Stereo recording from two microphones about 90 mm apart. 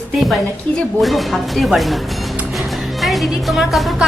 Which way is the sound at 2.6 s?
Centre (ahead or behind).